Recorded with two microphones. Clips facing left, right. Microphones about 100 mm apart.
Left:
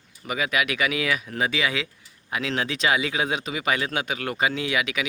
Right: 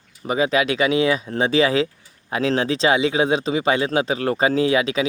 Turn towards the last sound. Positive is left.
turn(degrees=-30)  # may be behind; listen again after turning